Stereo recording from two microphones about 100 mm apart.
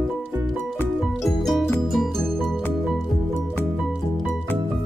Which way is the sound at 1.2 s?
Centre (ahead or behind).